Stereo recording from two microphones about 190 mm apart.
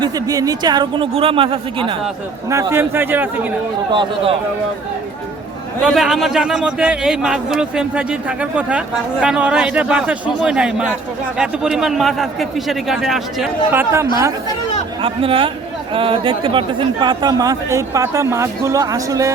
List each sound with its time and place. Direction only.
0.0 s speech: 20° right (ahead or behind)
2.5 s a man's voice: 15° right (ahead or behind)
5.8 s a man's voice: centre (ahead or behind)
13.7 s a man's voice: 10° right (ahead or behind)
15.0 s speech: 30° right (ahead or behind)